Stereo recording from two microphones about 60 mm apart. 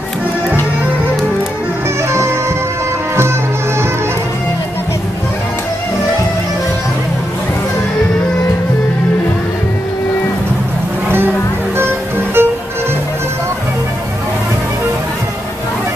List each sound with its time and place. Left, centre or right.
12.4 s music: right